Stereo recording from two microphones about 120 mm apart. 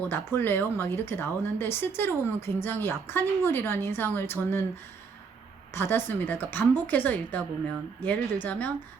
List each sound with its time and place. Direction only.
0.1 s a woman's voice: 15° left (ahead or behind)
5.7 s speech: 20° left (ahead or behind)